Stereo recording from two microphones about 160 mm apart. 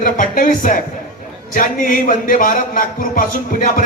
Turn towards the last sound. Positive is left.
turn(degrees=60)  # may be behind; listen again after turning